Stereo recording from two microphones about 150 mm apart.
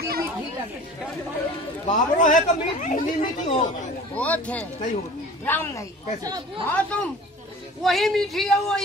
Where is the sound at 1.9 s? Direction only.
55° left (ahead or behind).